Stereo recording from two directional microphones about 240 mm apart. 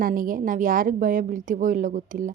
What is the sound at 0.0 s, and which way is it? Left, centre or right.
Speech, right.